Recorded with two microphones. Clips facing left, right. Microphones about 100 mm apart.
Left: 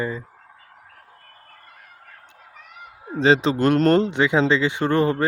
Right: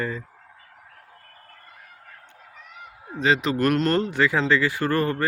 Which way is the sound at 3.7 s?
40° left (ahead or behind).